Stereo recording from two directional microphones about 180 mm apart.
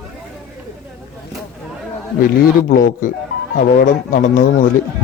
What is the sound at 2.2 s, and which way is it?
A man's voice, 50° left (ahead or behind).